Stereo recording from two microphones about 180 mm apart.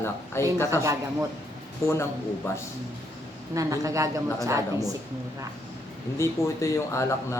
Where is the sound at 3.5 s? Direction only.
20° right (ahead or behind).